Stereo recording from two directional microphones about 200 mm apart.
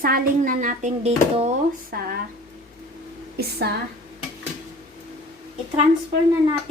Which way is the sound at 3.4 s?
50° right (ahead or behind).